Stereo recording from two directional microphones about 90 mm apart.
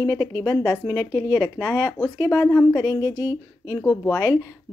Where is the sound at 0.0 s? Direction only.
45° left (ahead or behind).